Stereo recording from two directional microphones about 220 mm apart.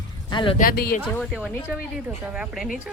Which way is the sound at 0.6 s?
45° left (ahead or behind).